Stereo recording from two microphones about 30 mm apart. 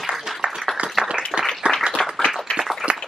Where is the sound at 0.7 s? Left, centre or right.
Centre.